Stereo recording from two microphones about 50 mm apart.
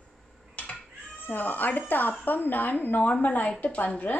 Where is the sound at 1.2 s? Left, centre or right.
Left.